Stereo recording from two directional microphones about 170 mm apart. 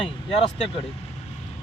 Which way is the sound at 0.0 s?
35° left (ahead or behind).